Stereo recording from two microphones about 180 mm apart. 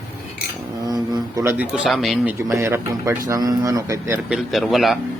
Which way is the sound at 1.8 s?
Centre (ahead or behind).